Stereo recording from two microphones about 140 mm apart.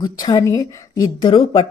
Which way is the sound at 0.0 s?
30° left (ahead or behind).